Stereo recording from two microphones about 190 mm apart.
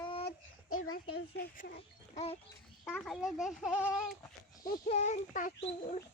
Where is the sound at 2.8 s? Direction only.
5° left (ahead or behind).